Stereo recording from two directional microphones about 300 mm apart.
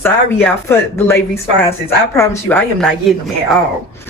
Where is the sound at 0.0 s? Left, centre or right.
Centre.